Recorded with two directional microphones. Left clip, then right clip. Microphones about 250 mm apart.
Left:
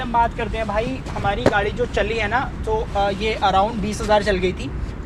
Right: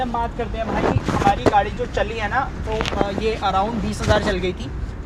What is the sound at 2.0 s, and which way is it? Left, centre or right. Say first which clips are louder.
Speech: left 1 dB; left.